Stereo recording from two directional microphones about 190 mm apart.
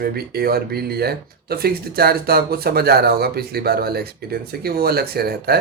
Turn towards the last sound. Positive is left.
turn(degrees=-55)  # may be behind; listen again after turning